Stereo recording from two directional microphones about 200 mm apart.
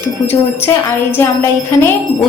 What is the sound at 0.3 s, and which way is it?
Wind chime, 10° left (ahead or behind).